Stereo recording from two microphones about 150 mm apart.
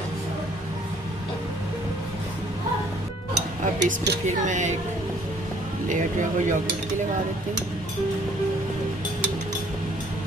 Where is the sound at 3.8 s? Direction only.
90° right.